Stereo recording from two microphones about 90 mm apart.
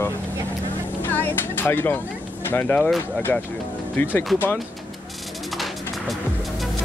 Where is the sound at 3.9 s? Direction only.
20° left (ahead or behind).